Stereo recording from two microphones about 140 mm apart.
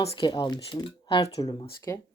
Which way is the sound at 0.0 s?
35° left (ahead or behind).